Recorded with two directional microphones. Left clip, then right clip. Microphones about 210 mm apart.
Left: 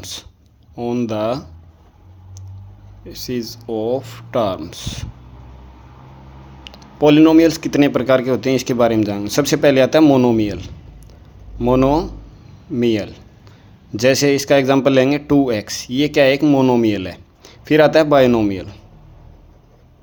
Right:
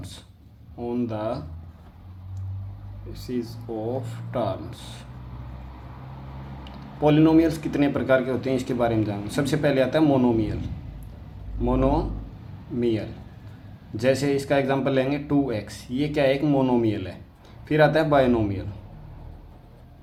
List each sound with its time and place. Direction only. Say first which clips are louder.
0.0 s speech: left 12 dB; 45° left (ahead or behind)
3.1 s speech: left 7 dB; 45° left (ahead or behind)
7.0 s speech: left 8 dB; 45° left (ahead or behind)
11.6 s speech: left 8 dB; 45° left (ahead or behind)